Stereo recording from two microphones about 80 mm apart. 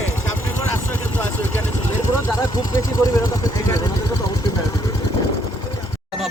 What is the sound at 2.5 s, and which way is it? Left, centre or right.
Vehicle, left.